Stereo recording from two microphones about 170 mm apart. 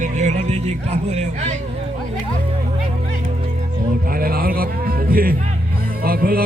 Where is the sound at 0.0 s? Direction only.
45° right (ahead or behind).